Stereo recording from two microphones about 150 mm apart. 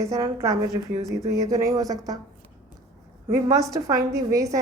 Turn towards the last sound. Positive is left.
turn(degrees=-20)  # may be behind; listen again after turning